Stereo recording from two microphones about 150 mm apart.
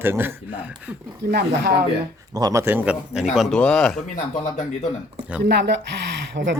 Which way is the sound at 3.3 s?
Centre (ahead or behind).